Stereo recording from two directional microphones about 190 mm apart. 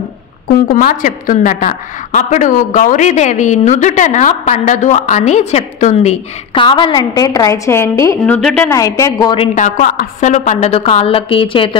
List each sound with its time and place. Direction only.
0.5 s a woman's voice: 50° left (ahead or behind); by 8.4 s 15° left (ahead or behind)
8.4 s a woman's voice: centre (ahead or behind)
8.6 s a woman's voice: 15° left (ahead or behind)
9.6 s a woman's voice: 40° left (ahead or behind)